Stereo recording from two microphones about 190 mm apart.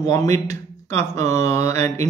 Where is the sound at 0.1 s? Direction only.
15° left (ahead or behind).